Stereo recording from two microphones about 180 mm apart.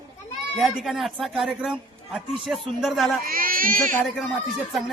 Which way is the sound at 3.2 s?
55° right (ahead or behind).